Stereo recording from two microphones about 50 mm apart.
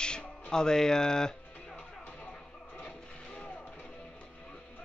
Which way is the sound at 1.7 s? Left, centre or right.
Left.